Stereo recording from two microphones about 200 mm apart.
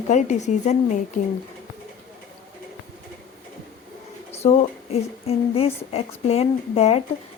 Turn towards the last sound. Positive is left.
turn(degrees=30)  # may be behind; listen again after turning